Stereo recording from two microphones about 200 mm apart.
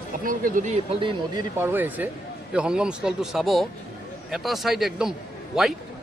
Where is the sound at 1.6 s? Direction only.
10° right (ahead or behind).